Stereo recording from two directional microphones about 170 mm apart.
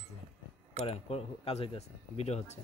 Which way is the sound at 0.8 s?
35° left (ahead or behind).